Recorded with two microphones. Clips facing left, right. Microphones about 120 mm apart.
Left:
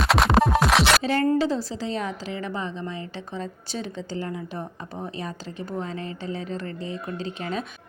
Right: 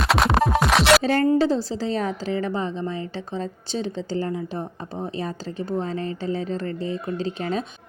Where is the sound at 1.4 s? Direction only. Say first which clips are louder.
Right 3 dB; 35° right (ahead or behind).